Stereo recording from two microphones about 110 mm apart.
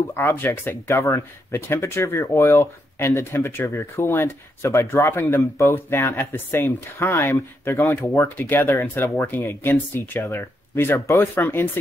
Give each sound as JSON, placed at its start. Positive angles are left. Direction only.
{"t": 0.1, "sound": "speech", "side_deg": 20}